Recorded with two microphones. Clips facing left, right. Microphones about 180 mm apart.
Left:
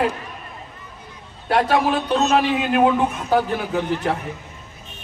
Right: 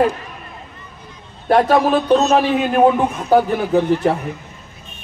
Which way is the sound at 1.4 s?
40° right (ahead or behind).